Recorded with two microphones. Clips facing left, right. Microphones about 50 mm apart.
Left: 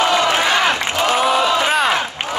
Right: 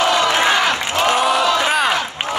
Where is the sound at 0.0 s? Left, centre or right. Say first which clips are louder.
Even; left.